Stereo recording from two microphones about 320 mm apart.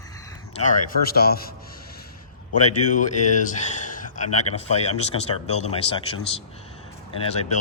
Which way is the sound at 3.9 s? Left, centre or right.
Left.